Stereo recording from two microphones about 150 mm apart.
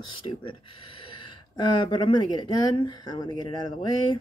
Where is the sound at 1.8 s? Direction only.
30° left (ahead or behind).